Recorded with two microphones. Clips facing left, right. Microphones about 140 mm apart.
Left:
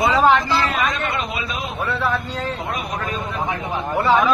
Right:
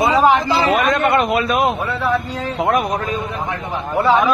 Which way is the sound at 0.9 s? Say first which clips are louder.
Right 9 dB; 60° right (ahead or behind).